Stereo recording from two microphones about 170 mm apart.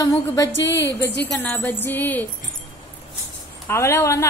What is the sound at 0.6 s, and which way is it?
Speech, 90° left.